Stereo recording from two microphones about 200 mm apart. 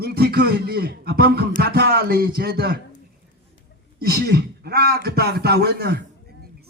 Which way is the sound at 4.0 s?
50° right (ahead or behind).